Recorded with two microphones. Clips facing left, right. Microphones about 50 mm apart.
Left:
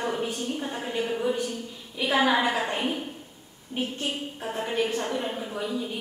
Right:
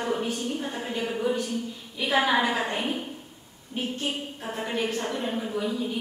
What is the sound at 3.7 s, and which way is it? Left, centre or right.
Speech, left.